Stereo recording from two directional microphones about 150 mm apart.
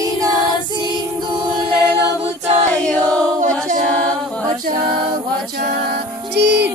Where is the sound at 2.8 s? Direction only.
10° left (ahead or behind).